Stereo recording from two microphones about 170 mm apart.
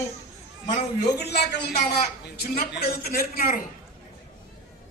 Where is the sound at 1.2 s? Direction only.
80° left; by 3.6 s 60° left (ahead or behind).